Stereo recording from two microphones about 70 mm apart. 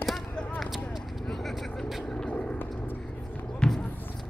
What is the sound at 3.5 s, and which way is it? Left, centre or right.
Basketball bounce, centre.